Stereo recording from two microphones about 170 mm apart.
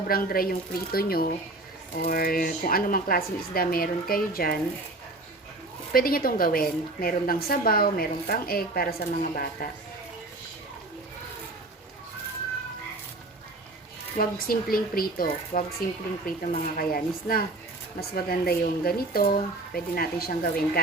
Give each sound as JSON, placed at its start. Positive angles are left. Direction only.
{"t": 0.1, "sound": "a woman's voice", "side_deg": 60}
{"t": 5.9, "sound": "a woman's voice", "side_deg": 60}
{"t": 14.2, "sound": "a woman's voice", "side_deg": 60}